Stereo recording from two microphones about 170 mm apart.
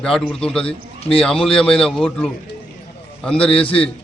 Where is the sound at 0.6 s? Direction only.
35° left (ahead or behind).